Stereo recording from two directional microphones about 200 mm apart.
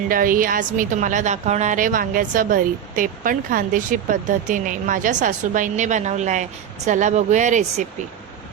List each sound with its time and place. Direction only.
0.1 s a woman's voice: 45° right (ahead or behind)